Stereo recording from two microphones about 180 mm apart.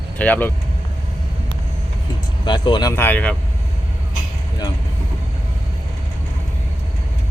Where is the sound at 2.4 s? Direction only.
25° left (ahead or behind); by 3.4 s 5° left (ahead or behind).